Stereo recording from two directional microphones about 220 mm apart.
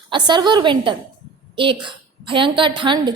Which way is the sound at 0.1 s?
20° right (ahead or behind).